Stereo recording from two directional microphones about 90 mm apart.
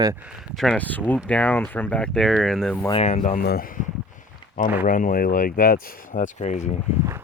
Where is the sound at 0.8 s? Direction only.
20° left (ahead or behind).